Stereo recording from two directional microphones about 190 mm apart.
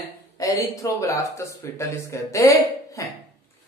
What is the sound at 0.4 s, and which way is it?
Speech, 15° left (ahead or behind).